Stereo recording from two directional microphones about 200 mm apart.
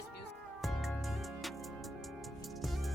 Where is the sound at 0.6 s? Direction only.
Centre (ahead or behind).